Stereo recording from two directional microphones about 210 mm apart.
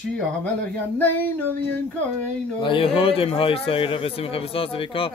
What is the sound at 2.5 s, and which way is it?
Speech, 25° left (ahead or behind).